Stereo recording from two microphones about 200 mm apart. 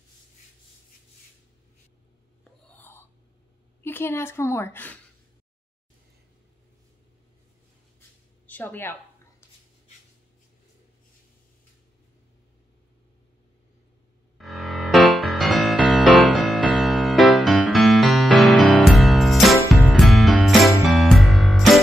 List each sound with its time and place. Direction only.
2.7 s whispering: 10° left (ahead or behind)
3.8 s a woman's voice: 10° left (ahead or behind)
8.5 s speech: 10° left (ahead or behind)
14.4 s music: centre (ahead or behind)